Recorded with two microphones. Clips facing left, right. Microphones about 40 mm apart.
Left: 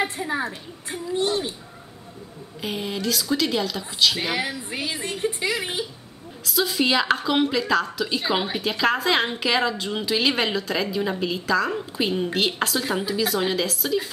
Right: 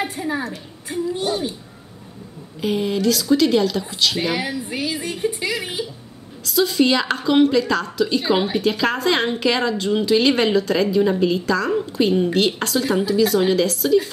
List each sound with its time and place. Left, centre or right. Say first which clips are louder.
0.1 s a sound: right 3 dB; centre
0.4 s speech: right 1 dB; left
1.1 s speech: left 3 dB; centre
2.6 s a woman's voice: right 8 dB; centre